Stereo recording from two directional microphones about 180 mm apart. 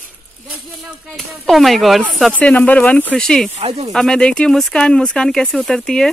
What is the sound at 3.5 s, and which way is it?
Speech, 35° right (ahead or behind).